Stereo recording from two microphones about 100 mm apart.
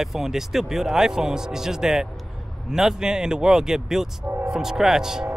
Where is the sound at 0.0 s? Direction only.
5° right (ahead or behind).